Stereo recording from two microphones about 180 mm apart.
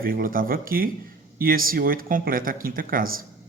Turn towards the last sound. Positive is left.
turn(degrees=-50)  # may be behind; listen again after turning